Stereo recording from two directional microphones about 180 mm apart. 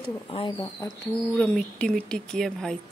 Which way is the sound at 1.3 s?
5° left (ahead or behind).